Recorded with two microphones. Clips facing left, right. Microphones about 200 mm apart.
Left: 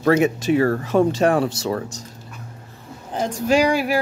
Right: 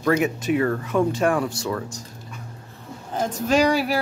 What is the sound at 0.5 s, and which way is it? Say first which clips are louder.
Speech: left 3 dB; 35° left (ahead or behind).